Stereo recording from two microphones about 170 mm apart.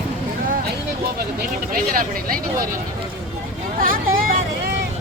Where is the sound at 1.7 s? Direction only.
55° right (ahead or behind).